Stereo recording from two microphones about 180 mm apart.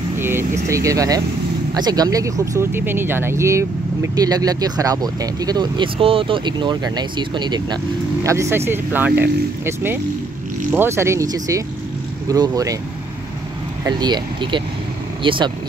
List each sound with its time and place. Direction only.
0.2 s vehicle: 15° right (ahead or behind)
0.7 s speech: 15° right (ahead or behind)
13.8 s speech: 25° right (ahead or behind)